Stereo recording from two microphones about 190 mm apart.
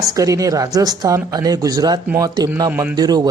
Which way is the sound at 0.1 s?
20° right (ahead or behind).